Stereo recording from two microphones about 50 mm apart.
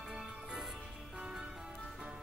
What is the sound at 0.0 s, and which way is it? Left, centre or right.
Music, centre.